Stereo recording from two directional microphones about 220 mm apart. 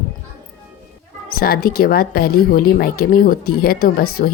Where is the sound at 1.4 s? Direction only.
45° left (ahead or behind).